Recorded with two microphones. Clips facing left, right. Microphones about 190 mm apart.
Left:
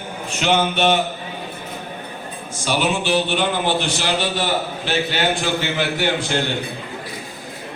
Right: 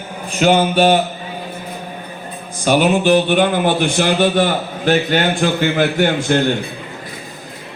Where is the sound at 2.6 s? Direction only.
50° right (ahead or behind).